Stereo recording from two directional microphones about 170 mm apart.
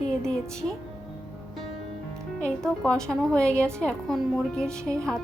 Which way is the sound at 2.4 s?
5° left (ahead or behind).